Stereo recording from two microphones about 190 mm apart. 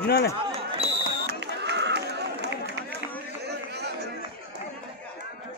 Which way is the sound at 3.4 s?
60° right (ahead or behind).